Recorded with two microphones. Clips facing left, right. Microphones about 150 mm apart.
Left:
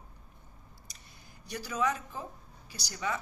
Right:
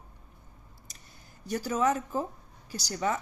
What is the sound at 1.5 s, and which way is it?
Speech, 45° right (ahead or behind).